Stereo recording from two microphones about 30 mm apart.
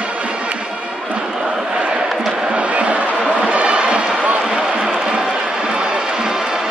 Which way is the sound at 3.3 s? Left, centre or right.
Right.